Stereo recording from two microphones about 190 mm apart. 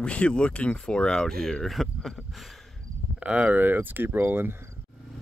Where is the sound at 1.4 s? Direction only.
Centre (ahead or behind).